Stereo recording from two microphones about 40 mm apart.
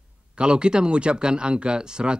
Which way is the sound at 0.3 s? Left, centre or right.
Right.